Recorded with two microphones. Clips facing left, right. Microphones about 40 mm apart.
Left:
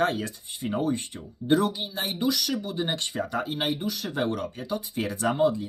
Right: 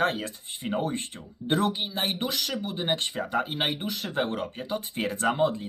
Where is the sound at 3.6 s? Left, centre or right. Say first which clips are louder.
Left 1 dB; right.